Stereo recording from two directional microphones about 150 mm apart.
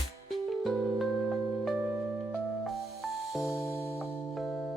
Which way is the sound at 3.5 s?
20° left (ahead or behind).